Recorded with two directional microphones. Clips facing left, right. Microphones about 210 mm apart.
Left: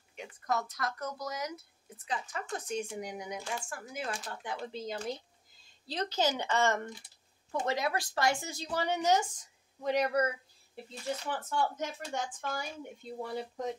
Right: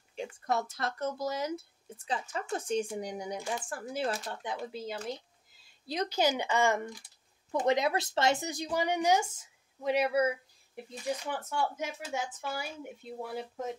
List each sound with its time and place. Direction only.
0.1 s speech: 30° right (ahead or behind)
4.3 s speech: 20° right (ahead or behind)
5.7 s speech: 10° right (ahead or behind)